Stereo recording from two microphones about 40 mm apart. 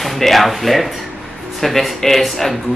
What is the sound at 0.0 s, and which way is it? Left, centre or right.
Speech, centre.